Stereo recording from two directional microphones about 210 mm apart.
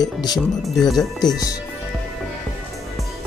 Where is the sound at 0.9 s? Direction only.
20° left (ahead or behind).